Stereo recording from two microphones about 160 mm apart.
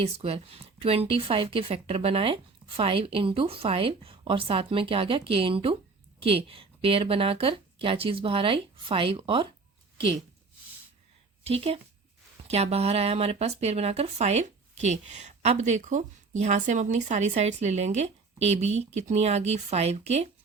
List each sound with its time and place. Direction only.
0.0 s a woman's voice: 35° right (ahead or behind)
11.4 s a woman's voice: 35° right (ahead or behind)